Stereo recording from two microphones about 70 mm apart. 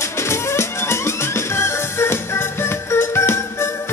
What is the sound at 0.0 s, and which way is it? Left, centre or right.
Music, left.